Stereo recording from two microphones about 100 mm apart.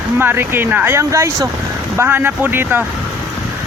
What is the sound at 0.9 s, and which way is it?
Speech, 30° right (ahead or behind).